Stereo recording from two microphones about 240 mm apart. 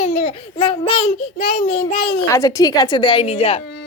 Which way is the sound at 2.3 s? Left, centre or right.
Centre.